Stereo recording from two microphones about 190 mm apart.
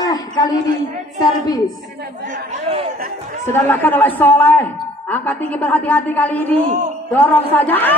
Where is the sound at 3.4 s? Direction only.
10° left (ahead or behind).